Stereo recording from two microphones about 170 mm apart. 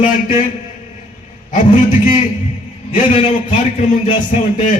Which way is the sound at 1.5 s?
45° left (ahead or behind).